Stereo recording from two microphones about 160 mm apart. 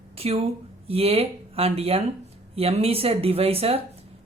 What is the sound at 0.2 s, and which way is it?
A woman's voice, 40° right (ahead or behind).